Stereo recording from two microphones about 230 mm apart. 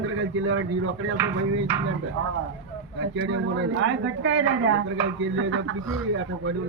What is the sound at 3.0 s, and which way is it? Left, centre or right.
A woman's voice, right.